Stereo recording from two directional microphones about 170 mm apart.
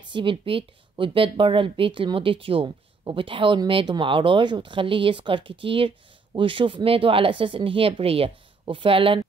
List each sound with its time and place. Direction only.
0.0 s speech: 30° right (ahead or behind)